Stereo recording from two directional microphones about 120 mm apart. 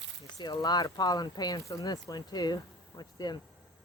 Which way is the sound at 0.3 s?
35° left (ahead or behind).